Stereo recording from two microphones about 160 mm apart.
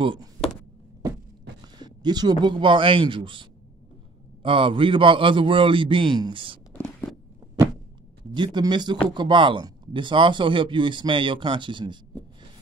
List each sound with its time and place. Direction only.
0.0 s speech: 30° right (ahead or behind)
1.8 s speech: 25° right (ahead or behind)
6.7 s a sound: 10° left (ahead or behind)
8.4 s speech: 30° right (ahead or behind)